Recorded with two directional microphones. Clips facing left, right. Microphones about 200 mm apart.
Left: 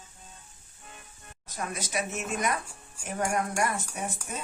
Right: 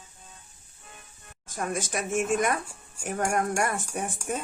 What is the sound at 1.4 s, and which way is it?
Speech, 50° right (ahead or behind).